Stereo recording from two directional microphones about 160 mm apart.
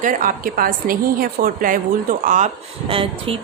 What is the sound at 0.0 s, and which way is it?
A woman's voice, 55° right (ahead or behind).